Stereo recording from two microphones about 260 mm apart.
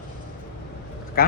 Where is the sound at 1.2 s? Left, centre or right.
Left.